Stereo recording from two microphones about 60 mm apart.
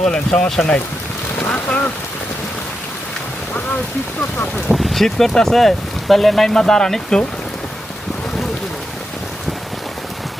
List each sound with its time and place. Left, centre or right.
0.0 s speech: centre
1.4 s boat: left
4.5 s speech: centre